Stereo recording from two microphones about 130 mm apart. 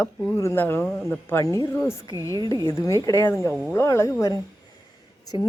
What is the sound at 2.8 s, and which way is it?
Speech, 25° left (ahead or behind).